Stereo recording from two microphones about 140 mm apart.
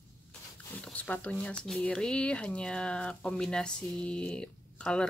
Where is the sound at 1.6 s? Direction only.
5° left (ahead or behind).